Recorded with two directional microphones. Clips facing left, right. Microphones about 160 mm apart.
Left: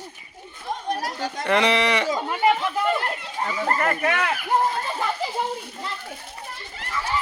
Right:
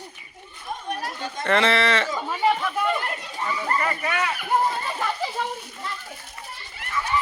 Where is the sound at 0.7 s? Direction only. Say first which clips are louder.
Left 3 dB; 35° left (ahead or behind).